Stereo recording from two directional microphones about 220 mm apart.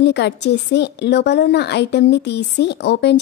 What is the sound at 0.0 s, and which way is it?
A woman's voice, 50° left (ahead or behind).